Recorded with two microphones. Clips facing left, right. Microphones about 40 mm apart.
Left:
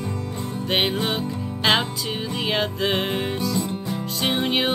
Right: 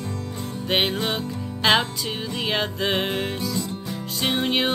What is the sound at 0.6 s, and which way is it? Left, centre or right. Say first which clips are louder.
Music: even; centre.